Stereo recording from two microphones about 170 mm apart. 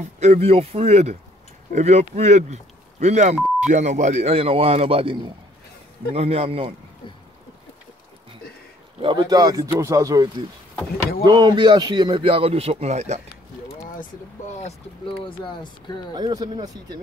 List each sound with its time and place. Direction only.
0.2 s a man's voice: 40° right (ahead or behind)
6.1 s a man's voice: 35° right (ahead or behind)
9.0 s a man's voice: 25° right (ahead or behind); by 13.2 s 40° right (ahead or behind)
13.9 s speech: 45° left (ahead or behind)
15.4 s speech: 30° left (ahead or behind)
16.2 s speech: 25° right (ahead or behind)